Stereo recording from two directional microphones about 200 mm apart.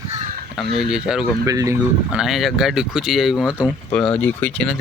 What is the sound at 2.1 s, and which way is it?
Speech, 5° right (ahead or behind).